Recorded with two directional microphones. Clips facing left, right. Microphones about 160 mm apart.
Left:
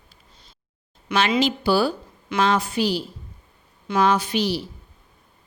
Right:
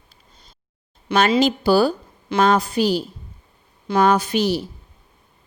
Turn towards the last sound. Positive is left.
turn(degrees=-50)  # may be behind; listen again after turning